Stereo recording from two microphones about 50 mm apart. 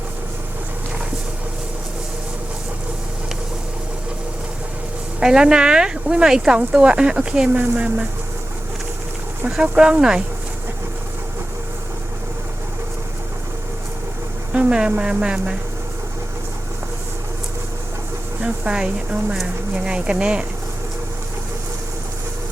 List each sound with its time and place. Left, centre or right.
5.2 s speech: centre
9.6 s speech: right
14.5 s speech: right
18.3 s speech: right